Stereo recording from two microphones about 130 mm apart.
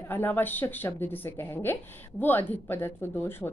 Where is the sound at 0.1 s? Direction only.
15° left (ahead or behind).